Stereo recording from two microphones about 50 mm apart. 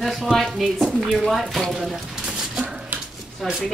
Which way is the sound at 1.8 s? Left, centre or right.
Centre.